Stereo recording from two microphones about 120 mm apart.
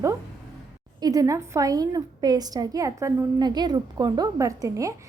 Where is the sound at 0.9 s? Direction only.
30° right (ahead or behind).